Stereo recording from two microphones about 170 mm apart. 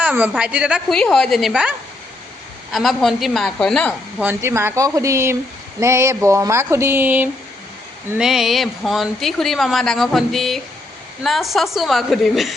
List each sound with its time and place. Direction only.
0.0 s speech: 10° right (ahead or behind)
0.9 s a woman's voice: 5° left (ahead or behind)
2.7 s a woman's voice: centre (ahead or behind)
4.2 s a woman's voice: 15° right (ahead or behind)